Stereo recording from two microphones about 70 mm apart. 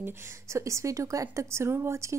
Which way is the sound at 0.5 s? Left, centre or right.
Right.